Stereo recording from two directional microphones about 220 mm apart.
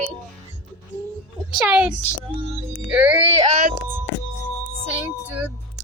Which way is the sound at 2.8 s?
5° right (ahead or behind).